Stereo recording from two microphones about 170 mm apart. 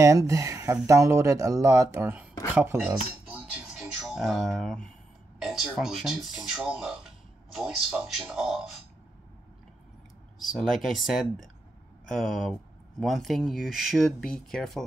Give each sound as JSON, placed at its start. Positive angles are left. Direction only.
{"t": 0.0, "sound": "speech", "side_deg": -20}
{"t": 2.5, "sound": "music", "side_deg": -15}
{"t": 5.4, "sound": "speech", "side_deg": 0}
{"t": 10.4, "sound": "speech", "side_deg": 0}